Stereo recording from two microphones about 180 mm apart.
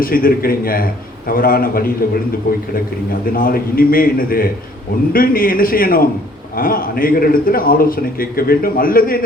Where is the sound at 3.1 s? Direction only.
50° left (ahead or behind).